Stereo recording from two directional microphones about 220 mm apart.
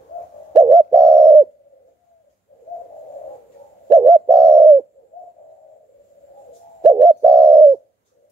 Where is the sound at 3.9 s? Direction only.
15° right (ahead or behind).